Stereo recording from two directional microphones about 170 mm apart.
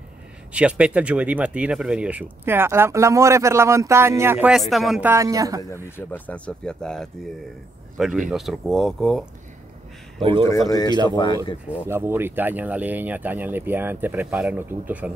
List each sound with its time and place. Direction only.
0.5 s speech: 5° right (ahead or behind)
4.5 s speech: centre (ahead or behind)
5.0 s speech: 15° right (ahead or behind)
5.9 s speech: 10° left (ahead or behind)
10.2 s speech: 30° right (ahead or behind)
10.7 s speech: 25° left (ahead or behind)
11.9 s speech: 15° right (ahead or behind)